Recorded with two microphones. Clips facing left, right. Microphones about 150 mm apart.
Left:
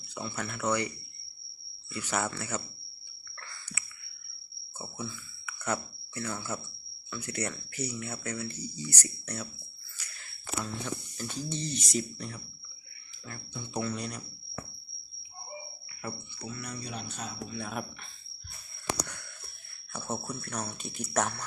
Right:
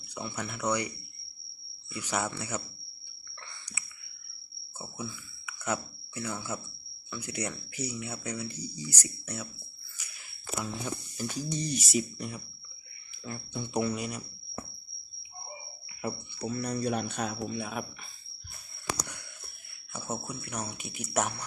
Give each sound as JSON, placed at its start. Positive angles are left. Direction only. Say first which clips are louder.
{"t": 0.1, "sound": "speech", "louder": "even", "side_deg": -15}
{"t": 3.5, "sound": "a sound", "louder": "left 2 dB", "side_deg": -20}
{"t": 4.8, "sound": "speech", "louder": "even", "side_deg": -10}
{"t": 16.0, "sound": "speech", "louder": "right 5 dB", "side_deg": -15}
{"t": 16.5, "sound": "speech", "louder": "right 8 dB", "side_deg": -35}
{"t": 16.8, "sound": "speech", "louder": "right 9 dB", "side_deg": -55}
{"t": 17.6, "sound": "speech", "louder": "right 1 dB", "side_deg": -5}
{"t": 19.9, "sound": "speech", "louder": "left 1 dB", "side_deg": -10}